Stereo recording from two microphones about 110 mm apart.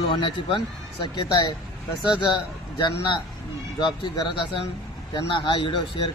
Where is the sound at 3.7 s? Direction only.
45° left (ahead or behind).